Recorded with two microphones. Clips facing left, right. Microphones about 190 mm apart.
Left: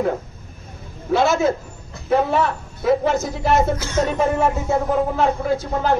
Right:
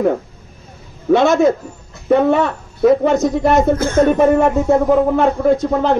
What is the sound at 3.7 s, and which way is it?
Speech, 55° right (ahead or behind).